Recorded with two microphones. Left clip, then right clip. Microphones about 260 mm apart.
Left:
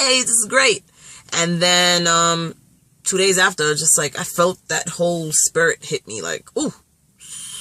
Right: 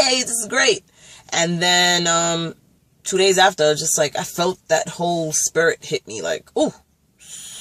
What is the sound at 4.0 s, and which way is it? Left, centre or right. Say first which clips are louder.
Speech: left 1 dB; centre.